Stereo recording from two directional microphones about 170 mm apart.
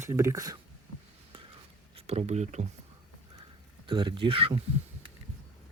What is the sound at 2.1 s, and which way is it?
Speech, 40° right (ahead or behind).